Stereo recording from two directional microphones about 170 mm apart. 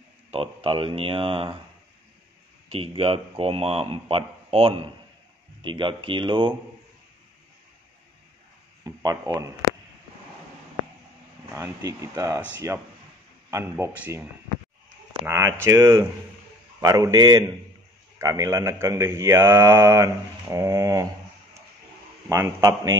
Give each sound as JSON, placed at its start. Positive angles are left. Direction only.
{"t": 0.3, "sound": "a man's voice", "side_deg": -35}
{"t": 2.7, "sound": "a man's voice", "side_deg": -35}
{"t": 8.8, "sound": "a sound", "side_deg": -20}
{"t": 11.5, "sound": "speech", "side_deg": -20}
{"t": 15.2, "sound": "speech", "side_deg": -15}
{"t": 22.3, "sound": "speech", "side_deg": -15}